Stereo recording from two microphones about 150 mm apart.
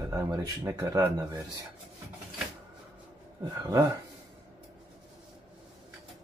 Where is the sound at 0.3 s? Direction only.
25° right (ahead or behind).